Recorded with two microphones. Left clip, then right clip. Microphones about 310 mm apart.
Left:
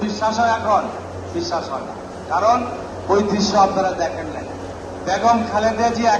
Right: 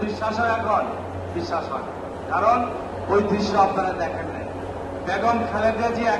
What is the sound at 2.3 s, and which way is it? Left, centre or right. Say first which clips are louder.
A man's voice: left 3 dB; left.